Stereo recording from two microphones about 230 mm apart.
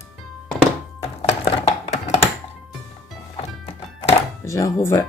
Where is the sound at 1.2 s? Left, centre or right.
Left.